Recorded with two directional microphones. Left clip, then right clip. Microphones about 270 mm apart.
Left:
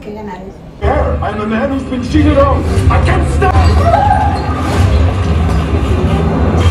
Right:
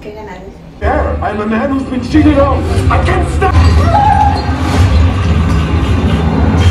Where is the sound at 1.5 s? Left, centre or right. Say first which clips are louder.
Right 1 dB; centre.